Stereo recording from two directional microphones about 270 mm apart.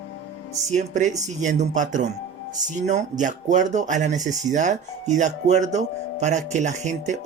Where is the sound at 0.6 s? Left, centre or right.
Right.